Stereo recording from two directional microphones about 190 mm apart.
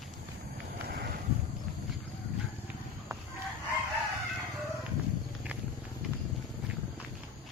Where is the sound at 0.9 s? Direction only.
55° right (ahead or behind).